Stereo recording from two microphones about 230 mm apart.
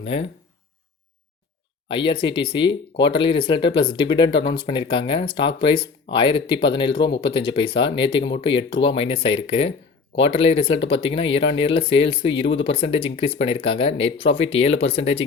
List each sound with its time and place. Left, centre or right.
0.0 s speech: left
2.0 s speech: left